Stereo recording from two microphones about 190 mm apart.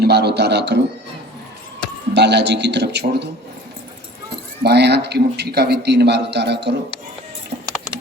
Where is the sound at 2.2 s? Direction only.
65° right (ahead or behind).